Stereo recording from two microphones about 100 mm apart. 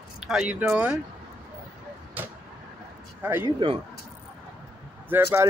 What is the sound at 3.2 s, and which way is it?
Speech, 25° right (ahead or behind).